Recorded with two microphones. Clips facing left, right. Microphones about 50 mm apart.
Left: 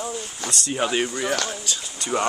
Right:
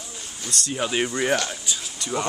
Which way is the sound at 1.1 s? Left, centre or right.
Centre.